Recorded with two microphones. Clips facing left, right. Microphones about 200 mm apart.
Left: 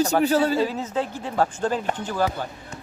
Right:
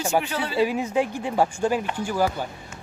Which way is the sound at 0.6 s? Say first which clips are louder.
Right 2 dB; 15° right (ahead or behind).